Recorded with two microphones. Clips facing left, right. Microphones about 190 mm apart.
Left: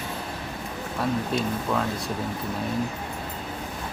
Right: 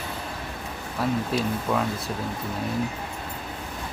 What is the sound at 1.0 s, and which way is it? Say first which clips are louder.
Speech: right 1 dB; 5° right (ahead or behind).